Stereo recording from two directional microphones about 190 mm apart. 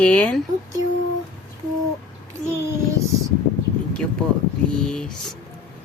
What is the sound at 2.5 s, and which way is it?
Child singing, 15° right (ahead or behind).